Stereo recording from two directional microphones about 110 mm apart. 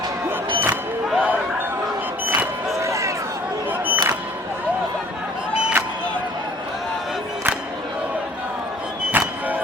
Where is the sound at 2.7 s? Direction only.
30° right (ahead or behind).